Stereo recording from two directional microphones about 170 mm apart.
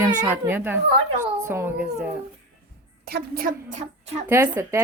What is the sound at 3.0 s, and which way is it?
A woman's voice, 65° right (ahead or behind).